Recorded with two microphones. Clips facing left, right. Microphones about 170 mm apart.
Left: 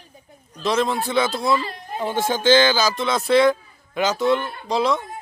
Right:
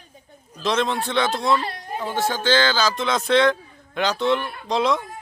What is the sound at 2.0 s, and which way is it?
Speech, 20° left (ahead or behind).